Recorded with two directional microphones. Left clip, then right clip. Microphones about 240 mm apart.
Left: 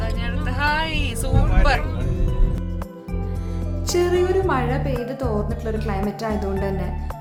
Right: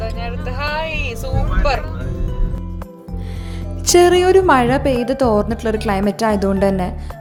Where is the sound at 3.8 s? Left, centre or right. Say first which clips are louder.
Right 9 dB; right.